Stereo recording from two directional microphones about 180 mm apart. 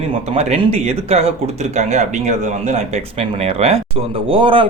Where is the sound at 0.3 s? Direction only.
35° right (ahead or behind).